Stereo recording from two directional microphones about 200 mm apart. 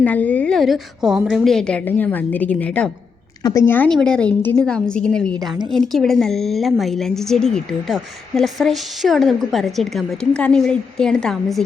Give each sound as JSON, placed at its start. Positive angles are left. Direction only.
{"t": 0.0, "sound": "a woman's voice", "side_deg": 10}
{"t": 5.4, "sound": "a woman's voice", "side_deg": -20}
{"t": 5.7, "sound": "a woman's voice", "side_deg": 0}